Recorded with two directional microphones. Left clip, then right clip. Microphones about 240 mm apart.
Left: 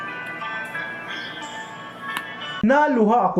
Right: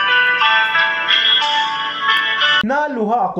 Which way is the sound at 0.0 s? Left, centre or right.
Right.